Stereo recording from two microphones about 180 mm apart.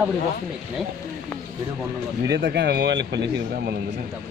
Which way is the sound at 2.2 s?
70° right (ahead or behind).